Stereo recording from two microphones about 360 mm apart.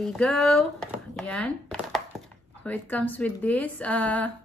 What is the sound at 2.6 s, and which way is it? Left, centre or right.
A woman's voice, centre.